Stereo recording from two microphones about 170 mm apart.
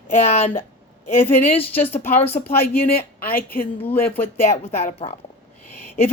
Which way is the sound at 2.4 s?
50° left (ahead or behind).